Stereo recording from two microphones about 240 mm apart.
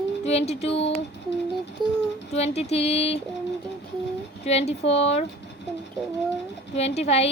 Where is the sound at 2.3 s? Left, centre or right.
Left.